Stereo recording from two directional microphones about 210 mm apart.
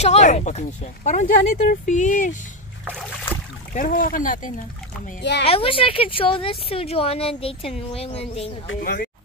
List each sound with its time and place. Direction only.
0.0 s speech: 30° left (ahead or behind)
3.7 s speech: 40° left (ahead or behind)
5.4 s speech: 25° left (ahead or behind)
8.8 s speech: 45° left (ahead or behind)